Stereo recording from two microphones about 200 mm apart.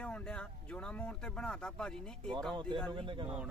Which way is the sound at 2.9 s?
25° right (ahead or behind).